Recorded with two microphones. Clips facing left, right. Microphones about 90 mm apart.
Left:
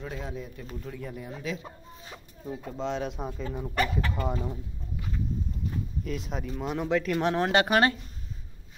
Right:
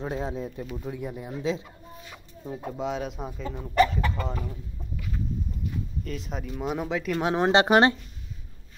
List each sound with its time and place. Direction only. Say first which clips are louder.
0.0 s speech: right 6 dB; 30° right (ahead or behind)
0.7 s speech: even; 20° right (ahead or behind)
2.8 s speech: even; 5° right (ahead or behind)
4.3 s speech: left 2 dB; 20° left (ahead or behind)
6.0 s speech: left 1 dB; centre (ahead or behind)
7.4 s speech: right 6 dB; 25° right (ahead or behind)